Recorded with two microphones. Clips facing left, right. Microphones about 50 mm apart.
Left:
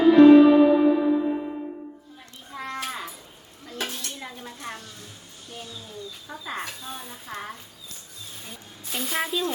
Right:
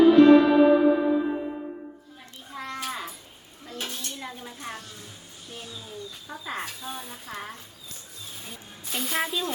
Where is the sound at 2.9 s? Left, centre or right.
Centre.